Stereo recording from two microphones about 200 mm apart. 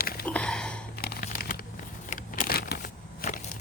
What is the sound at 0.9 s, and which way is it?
Crumpling, 50° left (ahead or behind).